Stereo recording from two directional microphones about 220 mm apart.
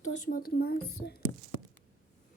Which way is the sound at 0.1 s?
40° left (ahead or behind).